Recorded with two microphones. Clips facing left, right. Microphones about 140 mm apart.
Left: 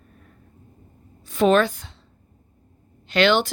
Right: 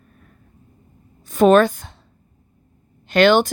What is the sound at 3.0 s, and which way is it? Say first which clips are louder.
Speech: right 5 dB; 45° right (ahead or behind).